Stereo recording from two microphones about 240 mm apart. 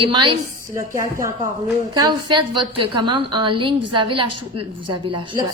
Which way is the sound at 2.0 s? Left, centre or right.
Centre.